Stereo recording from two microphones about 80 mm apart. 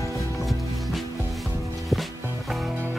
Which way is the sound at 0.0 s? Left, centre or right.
Left.